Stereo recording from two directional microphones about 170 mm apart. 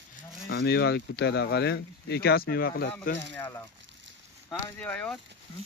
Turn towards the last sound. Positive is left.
turn(degrees=5)  # may be behind; listen again after turning